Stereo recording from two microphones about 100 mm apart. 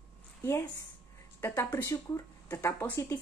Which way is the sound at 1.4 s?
25° left (ahead or behind).